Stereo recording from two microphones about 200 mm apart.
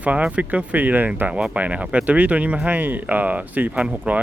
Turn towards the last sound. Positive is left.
turn(degrees=-5)  # may be behind; listen again after turning